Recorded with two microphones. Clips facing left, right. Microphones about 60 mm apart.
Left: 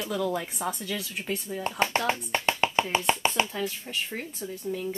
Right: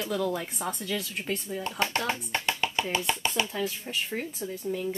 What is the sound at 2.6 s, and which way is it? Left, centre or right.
Music, left.